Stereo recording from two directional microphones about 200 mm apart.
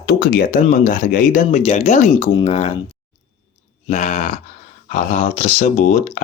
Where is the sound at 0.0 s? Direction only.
50° left (ahead or behind); by 2.7 s 30° left (ahead or behind).